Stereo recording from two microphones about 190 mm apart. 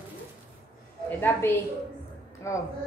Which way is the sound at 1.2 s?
10° left (ahead or behind).